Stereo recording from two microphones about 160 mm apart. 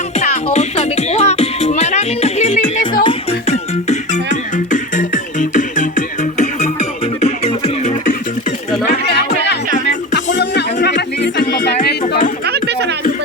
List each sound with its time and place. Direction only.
0.5 s music: 45° left (ahead or behind)
9.7 s music: 50° left (ahead or behind)
10.2 s music: 90° left
12.5 s music: 90° right